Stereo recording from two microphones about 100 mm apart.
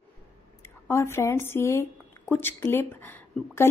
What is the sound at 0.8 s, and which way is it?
A woman's voice, 25° left (ahead or behind).